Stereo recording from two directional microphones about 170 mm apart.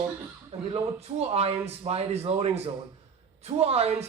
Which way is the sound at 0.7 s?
35° right (ahead or behind).